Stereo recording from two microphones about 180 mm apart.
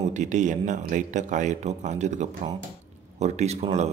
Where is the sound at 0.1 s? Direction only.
40° right (ahead or behind).